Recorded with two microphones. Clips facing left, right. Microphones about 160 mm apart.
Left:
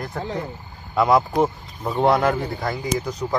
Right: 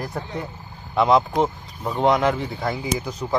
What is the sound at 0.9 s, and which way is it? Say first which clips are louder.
Speech: even; centre (ahead or behind).